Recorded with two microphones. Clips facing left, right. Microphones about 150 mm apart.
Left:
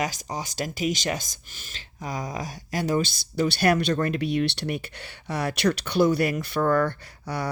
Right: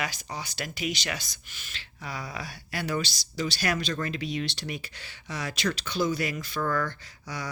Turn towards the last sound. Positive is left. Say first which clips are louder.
# left 7 dB
turn(degrees=60)  # may be behind; listen again after turning